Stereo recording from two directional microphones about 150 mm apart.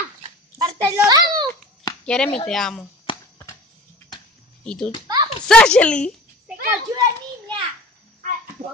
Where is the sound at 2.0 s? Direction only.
5° left (ahead or behind).